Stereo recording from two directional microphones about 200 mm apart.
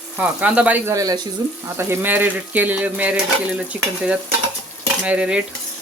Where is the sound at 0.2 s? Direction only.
5° right (ahead or behind).